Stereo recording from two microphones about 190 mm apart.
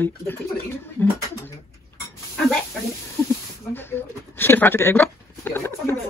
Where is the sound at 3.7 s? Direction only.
10° left (ahead or behind).